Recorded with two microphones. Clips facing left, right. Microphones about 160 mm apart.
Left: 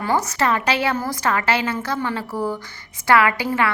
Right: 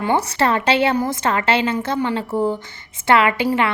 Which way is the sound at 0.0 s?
25° right (ahead or behind).